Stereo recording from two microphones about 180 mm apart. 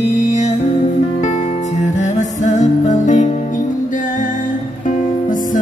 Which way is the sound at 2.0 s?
45° left (ahead or behind).